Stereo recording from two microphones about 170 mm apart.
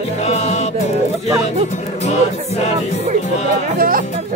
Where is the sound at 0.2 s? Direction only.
40° left (ahead or behind).